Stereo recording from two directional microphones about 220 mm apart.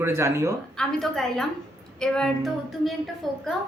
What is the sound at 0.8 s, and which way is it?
A woman's voice, centre (ahead or behind).